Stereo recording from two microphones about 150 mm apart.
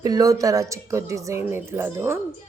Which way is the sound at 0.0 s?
25° right (ahead or behind).